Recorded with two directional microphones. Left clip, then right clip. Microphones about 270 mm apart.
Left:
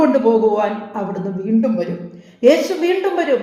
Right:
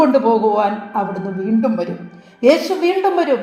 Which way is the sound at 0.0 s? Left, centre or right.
Centre.